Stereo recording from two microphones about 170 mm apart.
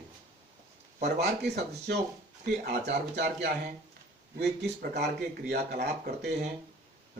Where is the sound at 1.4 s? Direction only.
75° right (ahead or behind).